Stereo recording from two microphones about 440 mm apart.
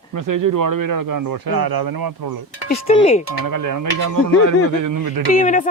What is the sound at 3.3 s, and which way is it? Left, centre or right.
Speech, right.